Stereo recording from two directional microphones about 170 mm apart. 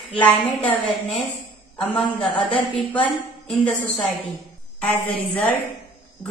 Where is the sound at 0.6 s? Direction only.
10° left (ahead or behind).